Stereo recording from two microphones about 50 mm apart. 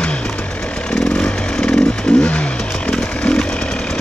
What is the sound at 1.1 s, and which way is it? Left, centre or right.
Chainsaw, left.